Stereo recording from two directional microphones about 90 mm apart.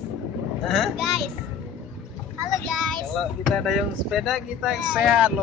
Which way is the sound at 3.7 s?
Centre (ahead or behind).